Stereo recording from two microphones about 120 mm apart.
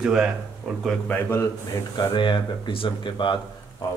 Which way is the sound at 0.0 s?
5° right (ahead or behind).